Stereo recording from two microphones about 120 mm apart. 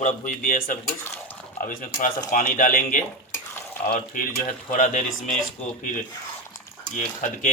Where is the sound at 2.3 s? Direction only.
90° left.